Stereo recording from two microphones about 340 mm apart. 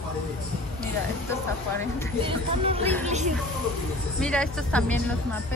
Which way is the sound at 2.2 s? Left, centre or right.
Centre.